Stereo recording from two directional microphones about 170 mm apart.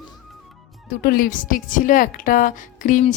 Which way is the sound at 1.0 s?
55° left (ahead or behind).